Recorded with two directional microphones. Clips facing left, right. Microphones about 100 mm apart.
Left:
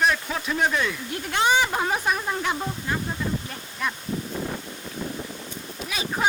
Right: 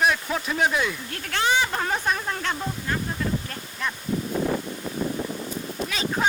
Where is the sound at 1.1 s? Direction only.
15° left (ahead or behind).